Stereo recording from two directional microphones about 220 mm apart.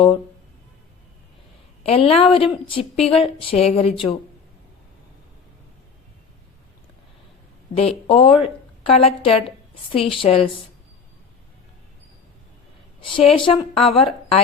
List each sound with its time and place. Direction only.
1.8 s a woman's voice: 25° left (ahead or behind)
7.8 s a woman's voice: 25° left (ahead or behind)
13.0 s a woman's voice: 20° left (ahead or behind)